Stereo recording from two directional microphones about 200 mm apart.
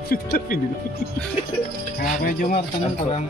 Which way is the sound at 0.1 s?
50° left (ahead or behind).